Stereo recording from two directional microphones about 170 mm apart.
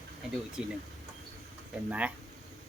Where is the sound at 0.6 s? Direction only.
5° right (ahead or behind).